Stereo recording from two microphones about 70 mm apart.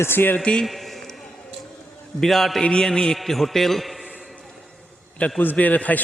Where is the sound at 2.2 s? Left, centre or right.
Centre.